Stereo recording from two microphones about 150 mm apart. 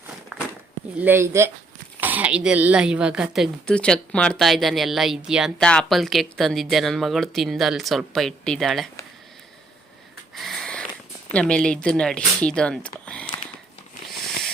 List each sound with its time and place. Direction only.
0.3 s a sound: centre (ahead or behind)
0.9 s a woman's voice: 15° right (ahead or behind); by 8.9 s centre (ahead or behind)
10.3 s sniff: centre (ahead or behind)
11.3 s speech: 5° left (ahead or behind)